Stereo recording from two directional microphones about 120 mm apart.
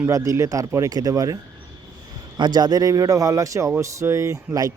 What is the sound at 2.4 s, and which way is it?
A man's voice, 35° right (ahead or behind).